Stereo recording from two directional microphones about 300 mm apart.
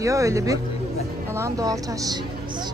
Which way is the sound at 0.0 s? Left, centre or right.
Centre.